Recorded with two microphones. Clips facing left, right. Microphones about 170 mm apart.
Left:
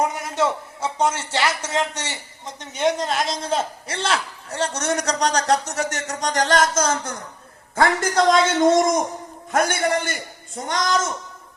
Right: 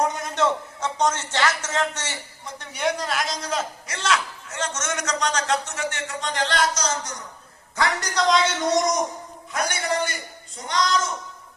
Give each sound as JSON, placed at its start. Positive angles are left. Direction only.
{"t": 0.0, "sound": "a man's voice", "side_deg": 5}